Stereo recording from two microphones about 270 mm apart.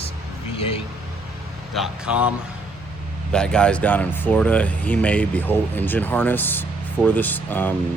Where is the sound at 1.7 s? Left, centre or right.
Centre.